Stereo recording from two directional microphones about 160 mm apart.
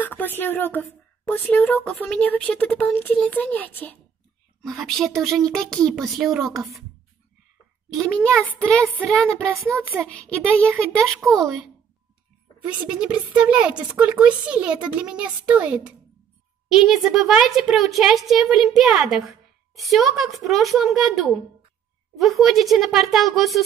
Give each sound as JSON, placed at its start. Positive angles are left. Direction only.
{"t": 0.0, "sound": "speech", "side_deg": 10}
{"t": 8.0, "sound": "speech", "side_deg": 5}
{"t": 9.5, "sound": "a woman's voice", "side_deg": -20}
{"t": 10.0, "sound": "speech", "side_deg": 10}
{"t": 12.6, "sound": "a woman's voice", "side_deg": -5}